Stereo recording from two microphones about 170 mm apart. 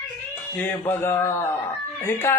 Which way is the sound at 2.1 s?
15° left (ahead or behind).